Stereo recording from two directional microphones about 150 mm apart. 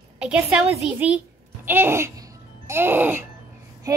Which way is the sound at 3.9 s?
25° right (ahead or behind).